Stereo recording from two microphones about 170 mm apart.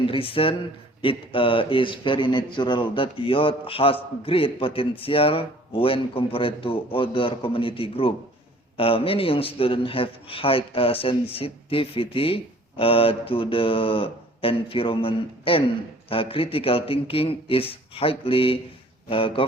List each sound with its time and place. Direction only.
0.0 s speech: 30° left (ahead or behind)